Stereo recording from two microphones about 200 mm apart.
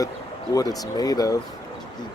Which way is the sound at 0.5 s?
20° left (ahead or behind).